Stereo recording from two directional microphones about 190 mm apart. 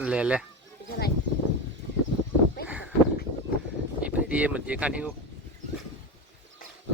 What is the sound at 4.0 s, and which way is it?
Speech, 5° right (ahead or behind).